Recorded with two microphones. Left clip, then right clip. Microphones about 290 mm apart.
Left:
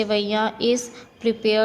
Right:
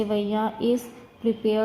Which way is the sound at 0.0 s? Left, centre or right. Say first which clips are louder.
Left 4 dB; left.